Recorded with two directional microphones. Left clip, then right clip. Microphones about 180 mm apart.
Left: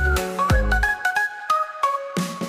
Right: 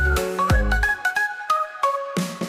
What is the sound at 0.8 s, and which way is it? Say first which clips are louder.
Music: right 1 dB; centre (ahead or behind).